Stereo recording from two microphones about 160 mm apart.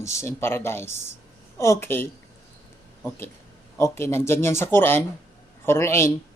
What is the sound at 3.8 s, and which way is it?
A man's voice, 15° left (ahead or behind).